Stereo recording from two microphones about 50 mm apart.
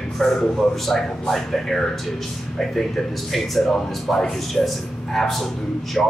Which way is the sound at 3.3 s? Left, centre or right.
Centre.